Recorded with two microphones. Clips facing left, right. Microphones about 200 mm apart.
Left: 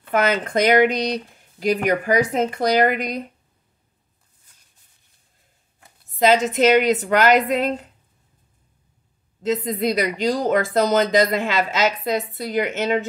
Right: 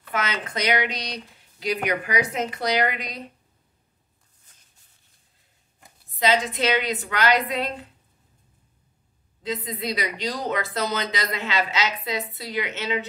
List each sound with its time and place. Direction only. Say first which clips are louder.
0.1 s speech: left 9 dB; 50° left (ahead or behind)
6.1 s speech: left 6 dB; 45° left (ahead or behind)
9.4 s speech: left 8 dB; 45° left (ahead or behind)